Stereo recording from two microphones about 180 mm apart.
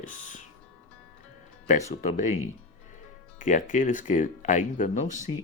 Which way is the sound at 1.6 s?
40° left (ahead or behind).